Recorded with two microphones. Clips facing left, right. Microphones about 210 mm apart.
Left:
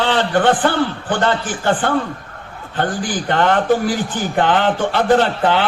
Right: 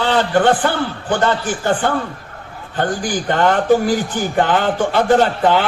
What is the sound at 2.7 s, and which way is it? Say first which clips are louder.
A man's voice: right 1 dB; 45° right (ahead or behind).